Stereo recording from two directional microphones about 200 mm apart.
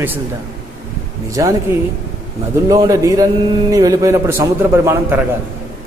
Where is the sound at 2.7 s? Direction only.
15° right (ahead or behind).